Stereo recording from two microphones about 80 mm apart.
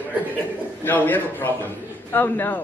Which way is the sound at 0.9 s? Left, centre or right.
Left.